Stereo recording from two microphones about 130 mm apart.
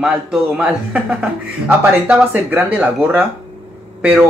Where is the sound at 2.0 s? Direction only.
10° right (ahead or behind).